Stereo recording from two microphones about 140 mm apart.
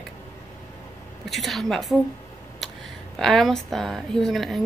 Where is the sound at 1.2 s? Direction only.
Centre (ahead or behind).